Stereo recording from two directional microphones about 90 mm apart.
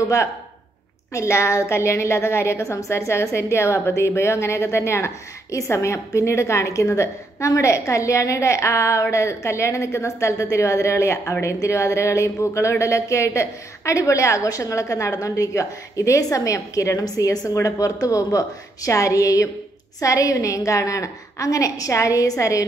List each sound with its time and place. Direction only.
1.1 s a woman's voice: 30° left (ahead or behind)